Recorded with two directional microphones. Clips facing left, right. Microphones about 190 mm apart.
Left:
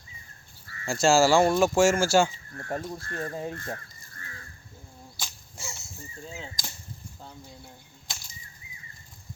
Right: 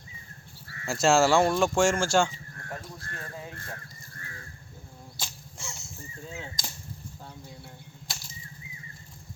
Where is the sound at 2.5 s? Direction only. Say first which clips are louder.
Left 9 dB; 50° left (ahead or behind).